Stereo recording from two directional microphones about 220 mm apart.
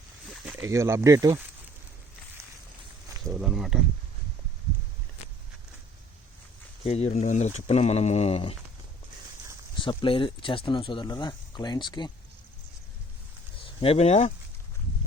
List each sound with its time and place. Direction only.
0.3 s a sound: centre (ahead or behind)
0.6 s speech: 10° right (ahead or behind)
3.2 s a sound: centre (ahead or behind)
6.8 s speech: 30° left (ahead or behind)
9.7 s speech: 25° left (ahead or behind)
13.6 s speech: 25° left (ahead or behind)